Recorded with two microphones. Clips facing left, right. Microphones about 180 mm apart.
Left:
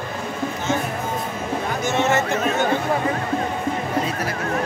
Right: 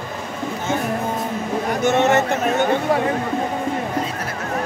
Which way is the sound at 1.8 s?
60° right (ahead or behind).